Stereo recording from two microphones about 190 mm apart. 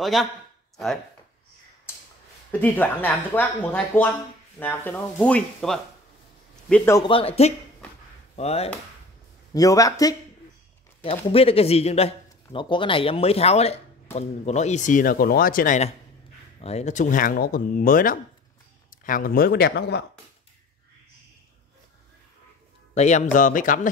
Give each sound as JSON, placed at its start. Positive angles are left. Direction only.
{"t": 0.0, "sound": "speech", "side_deg": 0}
{"t": 2.6, "sound": "speech", "side_deg": 10}
{"t": 6.7, "sound": "speech", "side_deg": 15}
{"t": 7.1, "sound": "a man's voice", "side_deg": 30}
{"t": 9.5, "sound": "speech", "side_deg": 15}
{"t": 11.1, "sound": "a man's voice", "side_deg": 30}
{"t": 22.9, "sound": "speech", "side_deg": 35}